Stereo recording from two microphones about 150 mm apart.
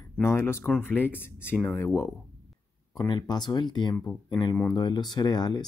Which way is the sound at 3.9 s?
15° left (ahead or behind).